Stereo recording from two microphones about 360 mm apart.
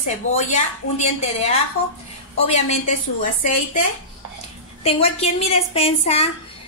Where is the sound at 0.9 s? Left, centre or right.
Centre.